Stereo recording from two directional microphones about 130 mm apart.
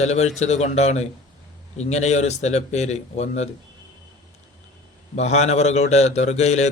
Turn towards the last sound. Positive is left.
turn(degrees=60)  # may be behind; listen again after turning